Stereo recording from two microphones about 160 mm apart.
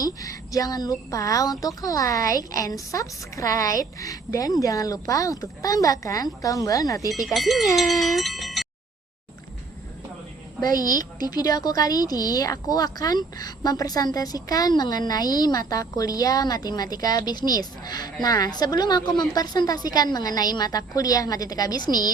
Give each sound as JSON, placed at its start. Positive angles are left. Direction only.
{"t": 0.0, "sound": "speech", "side_deg": 20}
{"t": 7.3, "sound": "speech", "side_deg": 0}
{"t": 7.8, "sound": "a sound", "side_deg": 0}
{"t": 10.6, "sound": "speech", "side_deg": 25}